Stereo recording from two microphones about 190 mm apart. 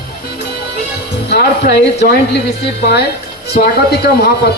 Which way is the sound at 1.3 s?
60° left (ahead or behind).